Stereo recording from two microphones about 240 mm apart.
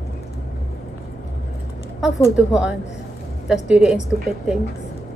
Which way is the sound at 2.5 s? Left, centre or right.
Centre.